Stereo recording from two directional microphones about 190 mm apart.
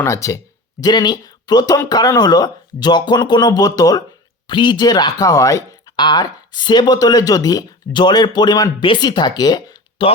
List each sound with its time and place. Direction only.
0.0 s speech: 15° left (ahead or behind)